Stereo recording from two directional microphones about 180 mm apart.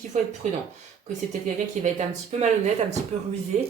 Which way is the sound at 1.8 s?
40° right (ahead or behind).